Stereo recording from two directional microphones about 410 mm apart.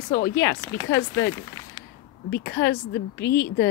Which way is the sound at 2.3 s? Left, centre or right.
Left.